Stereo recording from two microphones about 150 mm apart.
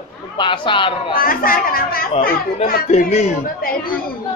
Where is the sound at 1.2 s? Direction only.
70° left (ahead or behind).